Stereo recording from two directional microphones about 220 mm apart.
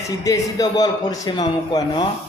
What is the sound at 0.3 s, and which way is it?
A man's voice, 15° left (ahead or behind).